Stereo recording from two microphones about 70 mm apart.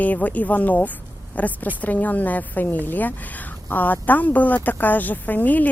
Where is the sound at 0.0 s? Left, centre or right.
Left.